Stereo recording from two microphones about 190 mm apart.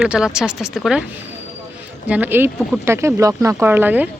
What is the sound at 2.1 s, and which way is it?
Speech, 10° right (ahead or behind).